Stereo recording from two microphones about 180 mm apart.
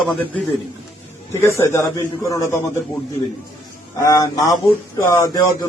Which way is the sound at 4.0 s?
20° left (ahead or behind).